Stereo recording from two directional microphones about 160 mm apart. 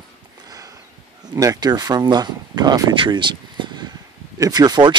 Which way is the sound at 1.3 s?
25° right (ahead or behind).